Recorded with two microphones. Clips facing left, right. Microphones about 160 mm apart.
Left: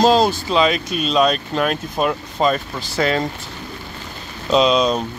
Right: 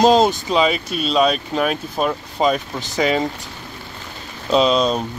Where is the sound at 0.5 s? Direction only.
5° right (ahead or behind).